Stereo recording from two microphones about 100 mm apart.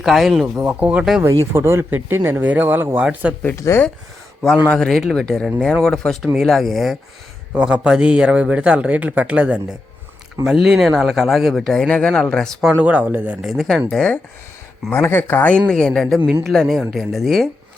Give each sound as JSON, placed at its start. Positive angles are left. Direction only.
{"t": 0.0, "sound": "speech", "side_deg": 0}
{"t": 0.4, "sound": "a man's voice", "side_deg": -15}
{"t": 1.2, "sound": "speech", "side_deg": -30}
{"t": 3.5, "sound": "speech", "side_deg": 30}
{"t": 4.7, "sound": "speech", "side_deg": 5}
{"t": 7.5, "sound": "a man's voice", "side_deg": -10}
{"t": 12.6, "sound": "a man's voice", "side_deg": -15}
{"t": 13.4, "sound": "speech", "side_deg": 0}
{"t": 14.8, "sound": "speech", "side_deg": 20}